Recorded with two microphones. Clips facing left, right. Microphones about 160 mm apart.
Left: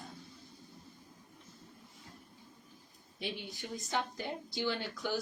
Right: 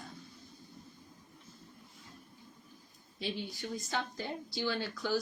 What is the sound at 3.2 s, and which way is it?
Speech, 20° left (ahead or behind).